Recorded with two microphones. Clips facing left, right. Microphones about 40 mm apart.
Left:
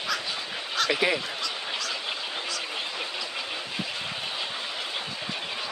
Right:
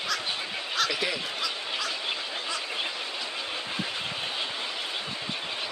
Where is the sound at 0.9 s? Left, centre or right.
Left.